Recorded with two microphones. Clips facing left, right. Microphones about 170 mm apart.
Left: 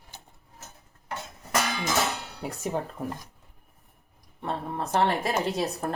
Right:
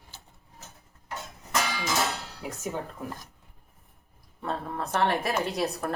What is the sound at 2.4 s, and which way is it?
Music, 35° left (ahead or behind).